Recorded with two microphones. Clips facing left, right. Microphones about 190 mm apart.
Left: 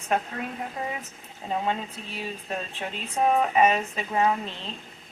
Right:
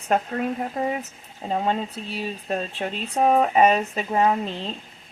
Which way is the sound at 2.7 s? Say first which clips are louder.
Right 4 dB; 35° right (ahead or behind).